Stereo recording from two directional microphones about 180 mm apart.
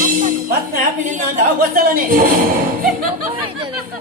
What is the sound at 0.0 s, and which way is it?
Speech, 50° right (ahead or behind).